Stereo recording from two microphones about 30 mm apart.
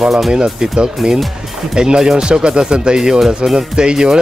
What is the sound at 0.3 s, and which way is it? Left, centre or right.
Speech, right.